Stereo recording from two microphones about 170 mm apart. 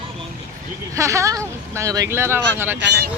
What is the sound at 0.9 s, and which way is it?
Speech, 15° right (ahead or behind).